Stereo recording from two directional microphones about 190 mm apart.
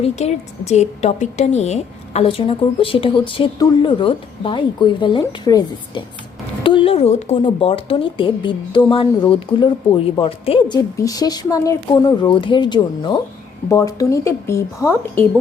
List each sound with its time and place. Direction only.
0.0 s a woman's voice: 35° left (ahead or behind); by 15.2 s 15° left (ahead or behind)